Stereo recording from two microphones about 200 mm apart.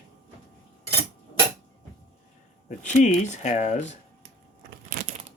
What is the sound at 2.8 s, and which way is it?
Speech, 35° left (ahead or behind).